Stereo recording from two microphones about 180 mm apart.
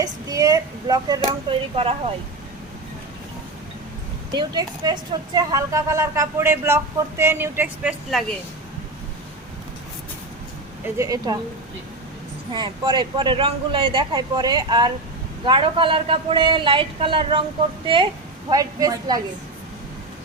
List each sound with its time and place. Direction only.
0.0 s speech: 20° right (ahead or behind)
1.7 s speech: 30° right (ahead or behind)
4.3 s a woman's voice: 20° right (ahead or behind)
10.9 s speech: 20° right (ahead or behind)
12.5 s speech: 25° right (ahead or behind)